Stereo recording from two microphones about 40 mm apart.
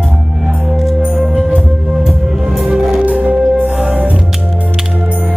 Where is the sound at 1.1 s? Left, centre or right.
Right.